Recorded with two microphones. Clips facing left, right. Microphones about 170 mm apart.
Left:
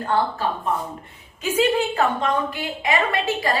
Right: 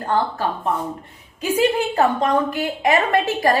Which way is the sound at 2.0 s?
40° right (ahead or behind).